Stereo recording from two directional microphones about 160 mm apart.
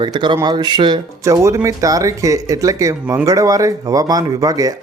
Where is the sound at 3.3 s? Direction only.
20° right (ahead or behind).